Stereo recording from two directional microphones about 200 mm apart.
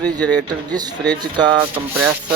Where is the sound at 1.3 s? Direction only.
20° right (ahead or behind).